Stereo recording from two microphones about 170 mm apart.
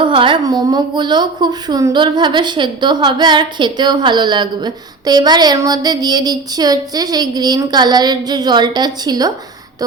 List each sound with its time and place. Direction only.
0.0 s a woman's voice: 30° right (ahead or behind)